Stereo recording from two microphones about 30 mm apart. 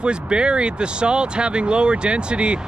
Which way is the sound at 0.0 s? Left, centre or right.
Right.